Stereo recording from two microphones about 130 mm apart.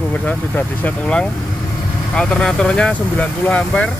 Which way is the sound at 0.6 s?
10° left (ahead or behind).